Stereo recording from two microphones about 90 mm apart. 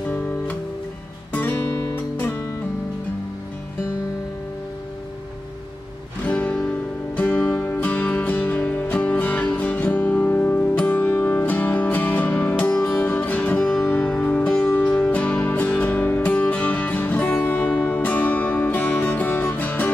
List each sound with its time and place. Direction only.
0.1 s music: 15° left (ahead or behind)
6.2 s music: 15° left (ahead or behind)